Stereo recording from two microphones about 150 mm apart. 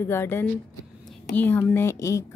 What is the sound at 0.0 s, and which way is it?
A woman's voice, 15° left (ahead or behind).